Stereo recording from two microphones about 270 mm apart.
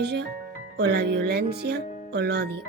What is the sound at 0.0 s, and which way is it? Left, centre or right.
Speech, right.